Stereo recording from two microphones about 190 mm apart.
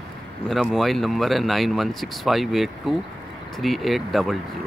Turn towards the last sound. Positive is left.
turn(degrees=0)  # may be behind; listen again after turning